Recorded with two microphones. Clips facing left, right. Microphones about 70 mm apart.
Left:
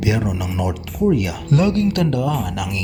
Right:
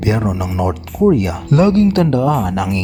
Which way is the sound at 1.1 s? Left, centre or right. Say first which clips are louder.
Right 4 dB; right.